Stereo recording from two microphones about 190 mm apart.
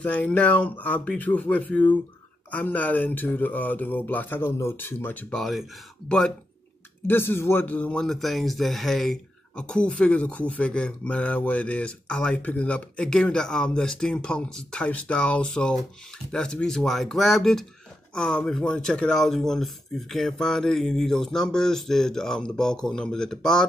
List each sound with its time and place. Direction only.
0.0 s speech: 5° left (ahead or behind)